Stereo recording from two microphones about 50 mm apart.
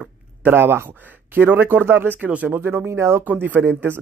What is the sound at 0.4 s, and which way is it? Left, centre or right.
Speech, right.